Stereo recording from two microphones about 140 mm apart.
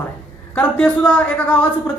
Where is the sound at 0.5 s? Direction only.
15° left (ahead or behind).